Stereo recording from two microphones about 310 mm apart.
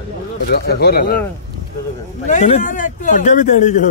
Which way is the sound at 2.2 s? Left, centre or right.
Left.